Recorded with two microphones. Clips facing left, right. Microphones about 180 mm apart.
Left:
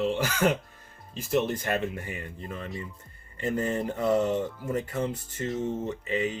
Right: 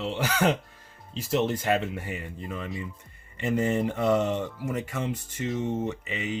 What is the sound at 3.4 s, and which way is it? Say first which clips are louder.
Speech: right 3 dB; 90° right.